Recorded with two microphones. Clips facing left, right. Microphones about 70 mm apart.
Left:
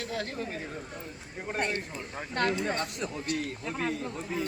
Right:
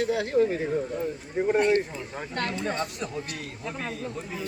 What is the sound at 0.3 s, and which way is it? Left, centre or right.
Speech, centre.